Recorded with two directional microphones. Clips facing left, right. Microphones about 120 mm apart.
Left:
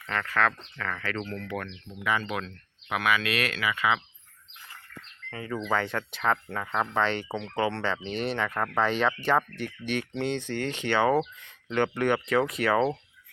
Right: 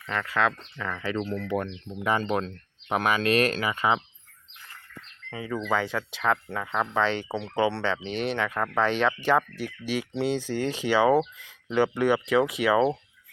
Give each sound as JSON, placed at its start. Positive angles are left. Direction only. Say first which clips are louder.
{"t": 0.1, "sound": "speech", "louder": "right 1 dB", "side_deg": -15}
{"t": 1.5, "sound": "speech", "louder": "right 6 dB", "side_deg": -25}
{"t": 2.0, "sound": "speech", "louder": "right 4 dB", "side_deg": -40}
{"t": 5.3, "sound": "speech", "louder": "right 1 dB", "side_deg": -10}